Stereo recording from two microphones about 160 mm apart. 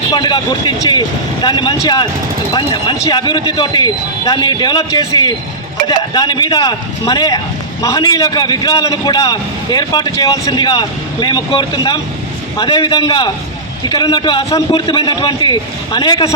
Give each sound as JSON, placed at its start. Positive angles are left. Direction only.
{"t": 0.1, "sound": "a man's voice", "side_deg": 30}